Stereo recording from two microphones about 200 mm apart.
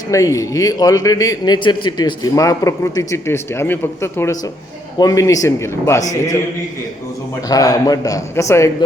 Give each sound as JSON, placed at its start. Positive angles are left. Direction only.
{"t": 0.1, "sound": "a man's voice", "side_deg": 15}
{"t": 7.4, "sound": "a man's voice", "side_deg": 15}